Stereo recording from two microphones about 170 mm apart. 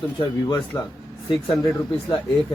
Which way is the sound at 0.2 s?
25° left (ahead or behind).